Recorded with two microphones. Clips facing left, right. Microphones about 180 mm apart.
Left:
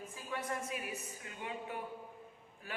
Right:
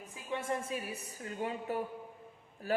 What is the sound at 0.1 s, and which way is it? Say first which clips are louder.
A woman's voice: right 5 dB; 25° right (ahead or behind).